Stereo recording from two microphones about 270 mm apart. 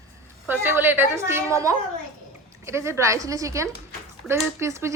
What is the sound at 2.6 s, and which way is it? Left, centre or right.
A woman's voice, centre.